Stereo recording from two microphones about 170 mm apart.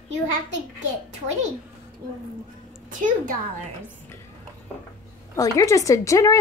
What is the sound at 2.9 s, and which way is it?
Speech, 50° right (ahead or behind).